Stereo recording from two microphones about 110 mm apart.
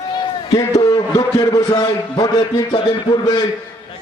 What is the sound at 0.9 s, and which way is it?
Speech, 30° left (ahead or behind).